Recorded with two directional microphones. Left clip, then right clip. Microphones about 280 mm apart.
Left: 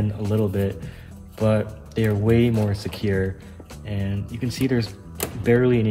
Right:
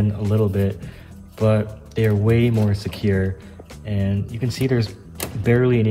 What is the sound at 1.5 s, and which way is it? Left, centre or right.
Speech, centre.